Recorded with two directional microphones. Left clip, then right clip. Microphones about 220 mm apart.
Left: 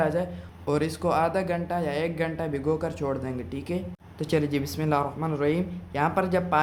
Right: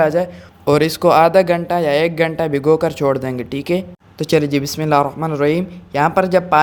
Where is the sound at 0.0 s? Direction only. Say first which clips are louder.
Right 11 dB; 30° right (ahead or behind).